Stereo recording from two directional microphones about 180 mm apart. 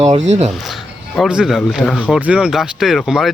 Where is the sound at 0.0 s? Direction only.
40° right (ahead or behind).